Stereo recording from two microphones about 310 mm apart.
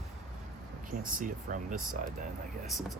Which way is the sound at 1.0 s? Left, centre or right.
Right.